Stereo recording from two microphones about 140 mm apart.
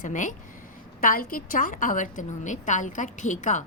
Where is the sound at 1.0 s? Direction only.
90° left; by 3.6 s 60° left (ahead or behind).